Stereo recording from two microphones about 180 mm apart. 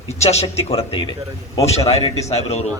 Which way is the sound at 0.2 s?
35° left (ahead or behind).